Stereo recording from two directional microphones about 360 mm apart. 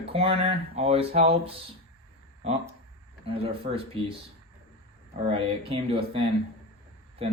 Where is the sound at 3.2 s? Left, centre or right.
Centre.